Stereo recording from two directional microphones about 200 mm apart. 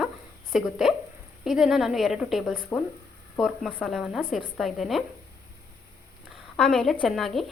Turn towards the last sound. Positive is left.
turn(degrees=0)  # may be behind; listen again after turning